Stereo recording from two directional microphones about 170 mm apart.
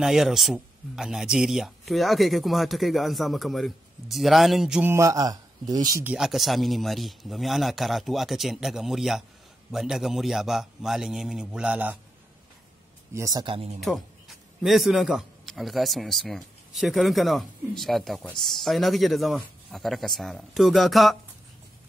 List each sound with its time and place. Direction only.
0.0 s speech: centre (ahead or behind)
4.9 s speech: 20° right (ahead or behind)
6.0 s speech: 5° right (ahead or behind)
13.1 s speech: 20° right (ahead or behind)
13.7 s a man's voice: centre (ahead or behind)